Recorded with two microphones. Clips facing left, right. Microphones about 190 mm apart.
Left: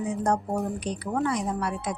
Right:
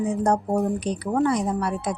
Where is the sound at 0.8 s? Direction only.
35° right (ahead or behind).